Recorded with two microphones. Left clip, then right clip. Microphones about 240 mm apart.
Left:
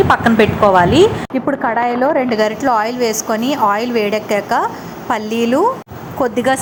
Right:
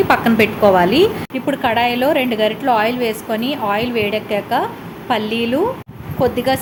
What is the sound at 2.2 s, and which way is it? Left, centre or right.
Speech, left.